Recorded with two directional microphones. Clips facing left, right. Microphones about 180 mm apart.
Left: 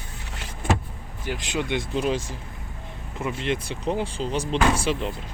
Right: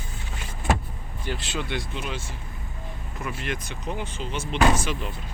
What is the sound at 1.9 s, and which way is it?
Speech, 35° left (ahead or behind).